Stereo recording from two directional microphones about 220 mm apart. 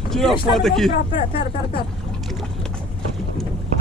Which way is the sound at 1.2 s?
25° left (ahead or behind).